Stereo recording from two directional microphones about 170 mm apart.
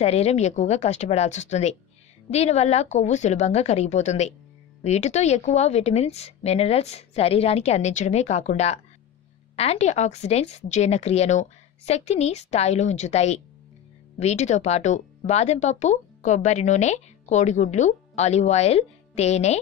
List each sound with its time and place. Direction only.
0.0 s speech: 40° left (ahead or behind)